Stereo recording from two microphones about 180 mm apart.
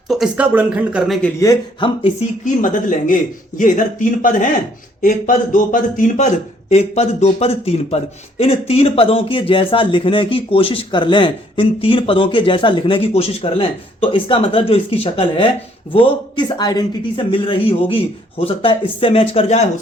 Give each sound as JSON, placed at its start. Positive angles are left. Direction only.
{"t": 0.1, "sound": "speech", "side_deg": -5}
{"t": 1.4, "sound": "speech", "side_deg": 20}
{"t": 2.4, "sound": "a man's voice", "side_deg": 45}